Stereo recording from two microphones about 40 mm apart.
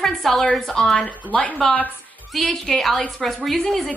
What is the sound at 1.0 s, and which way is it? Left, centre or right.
Speech, left.